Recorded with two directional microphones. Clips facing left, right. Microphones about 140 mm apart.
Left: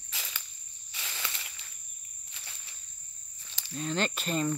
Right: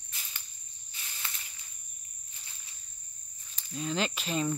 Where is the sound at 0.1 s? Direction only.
90° left.